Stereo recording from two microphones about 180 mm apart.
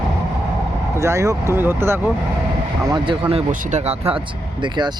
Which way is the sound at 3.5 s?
45° right (ahead or behind).